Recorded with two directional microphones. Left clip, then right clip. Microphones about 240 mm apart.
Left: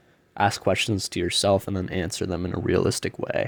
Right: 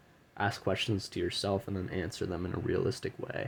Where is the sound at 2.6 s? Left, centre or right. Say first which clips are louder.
Left 10 dB; left.